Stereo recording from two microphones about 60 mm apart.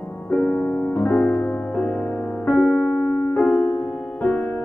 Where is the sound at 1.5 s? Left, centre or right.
Left.